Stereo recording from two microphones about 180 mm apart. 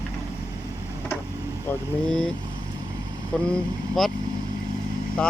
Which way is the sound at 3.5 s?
Centre (ahead or behind).